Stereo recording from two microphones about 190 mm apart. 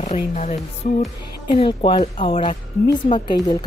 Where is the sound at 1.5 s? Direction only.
25° left (ahead or behind).